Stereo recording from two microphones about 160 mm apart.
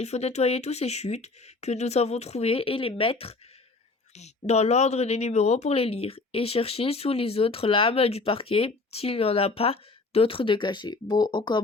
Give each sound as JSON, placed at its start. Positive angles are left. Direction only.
{"t": 0.0, "sound": "speech", "side_deg": 45}